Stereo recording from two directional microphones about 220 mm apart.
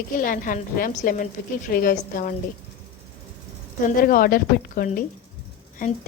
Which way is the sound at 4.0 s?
40° left (ahead or behind).